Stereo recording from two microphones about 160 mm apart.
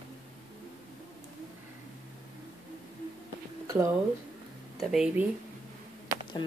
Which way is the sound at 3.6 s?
20° right (ahead or behind).